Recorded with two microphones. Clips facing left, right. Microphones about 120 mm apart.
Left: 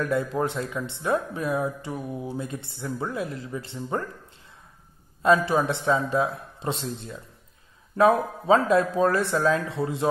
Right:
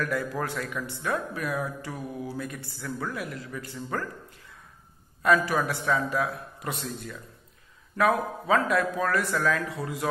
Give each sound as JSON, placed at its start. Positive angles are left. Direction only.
{"t": 0.0, "sound": "speech", "side_deg": 25}
{"t": 5.2, "sound": "speech", "side_deg": 25}